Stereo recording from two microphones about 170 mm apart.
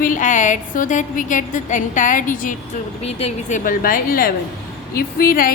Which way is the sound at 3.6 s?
55° left (ahead or behind).